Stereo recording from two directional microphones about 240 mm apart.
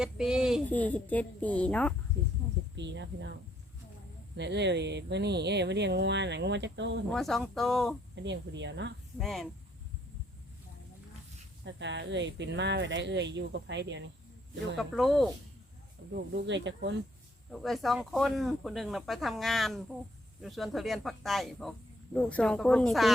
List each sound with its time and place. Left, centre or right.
0.0 s speech: centre
2.2 s a sound: right
2.7 s speech: right
4.4 s speech: right
7.1 s speech: centre
8.1 s speech: right
9.1 s speech: centre
11.6 s speech: right
14.8 s speech: centre
16.1 s speech: right
17.5 s speech: centre